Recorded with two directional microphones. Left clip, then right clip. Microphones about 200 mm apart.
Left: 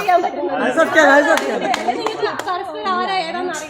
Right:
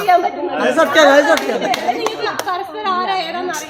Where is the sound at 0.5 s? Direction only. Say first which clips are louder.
Right 2 dB; 45° right (ahead or behind).